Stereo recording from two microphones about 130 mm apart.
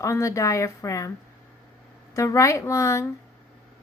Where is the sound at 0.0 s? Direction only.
25° left (ahead or behind).